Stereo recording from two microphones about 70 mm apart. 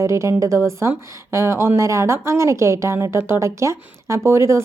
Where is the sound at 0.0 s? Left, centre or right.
Right.